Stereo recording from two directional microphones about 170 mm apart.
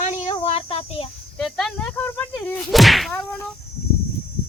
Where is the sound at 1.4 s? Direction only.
Centre (ahead or behind).